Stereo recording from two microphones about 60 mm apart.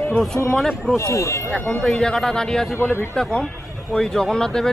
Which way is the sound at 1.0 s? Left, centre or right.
Left.